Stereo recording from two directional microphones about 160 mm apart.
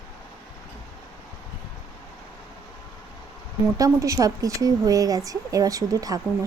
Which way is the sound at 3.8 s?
20° right (ahead or behind).